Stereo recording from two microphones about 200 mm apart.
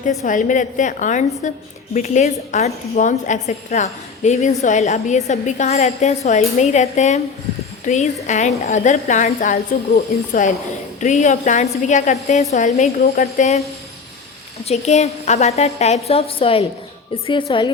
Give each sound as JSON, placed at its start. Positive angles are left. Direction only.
{"t": 0.2, "sound": "a woman's voice", "side_deg": 40}
{"t": 14.6, "sound": "a woman's voice", "side_deg": 35}